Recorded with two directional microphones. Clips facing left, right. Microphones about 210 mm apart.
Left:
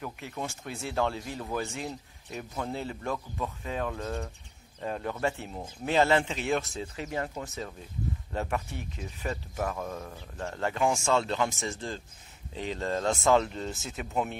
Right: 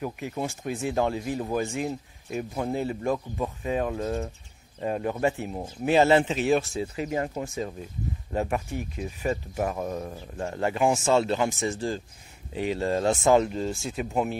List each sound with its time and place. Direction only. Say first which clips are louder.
0.0 s speech: right 6 dB; 20° right (ahead or behind)
13.6 s speech: right 6 dB; 30° right (ahead or behind)
13.9 s speech: right 3 dB; 15° right (ahead or behind)